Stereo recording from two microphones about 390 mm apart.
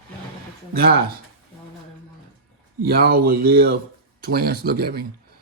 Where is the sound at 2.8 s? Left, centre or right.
Right.